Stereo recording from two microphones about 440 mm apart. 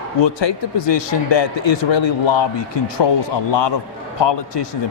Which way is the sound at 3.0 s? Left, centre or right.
Left.